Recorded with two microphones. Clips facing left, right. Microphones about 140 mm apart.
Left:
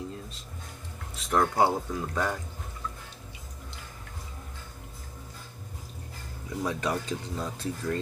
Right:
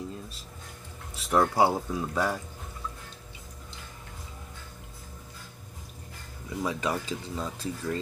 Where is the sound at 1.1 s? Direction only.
5° right (ahead or behind).